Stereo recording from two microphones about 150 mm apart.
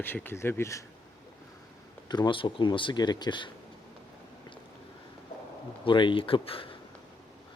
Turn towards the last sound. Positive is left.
turn(degrees=35)  # may be behind; listen again after turning